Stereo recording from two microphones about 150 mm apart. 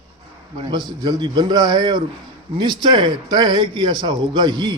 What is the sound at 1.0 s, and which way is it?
A man's voice, 30° right (ahead or behind).